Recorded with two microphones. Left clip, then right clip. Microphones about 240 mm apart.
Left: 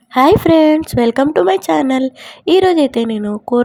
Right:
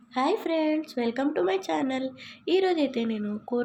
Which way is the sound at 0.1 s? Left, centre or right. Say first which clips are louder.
Left 16 dB; left.